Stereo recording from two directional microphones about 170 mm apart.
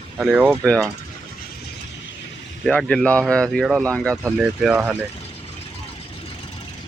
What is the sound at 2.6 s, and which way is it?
Speech, 5° left (ahead or behind).